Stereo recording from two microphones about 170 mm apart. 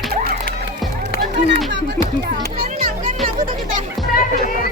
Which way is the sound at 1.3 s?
90° right.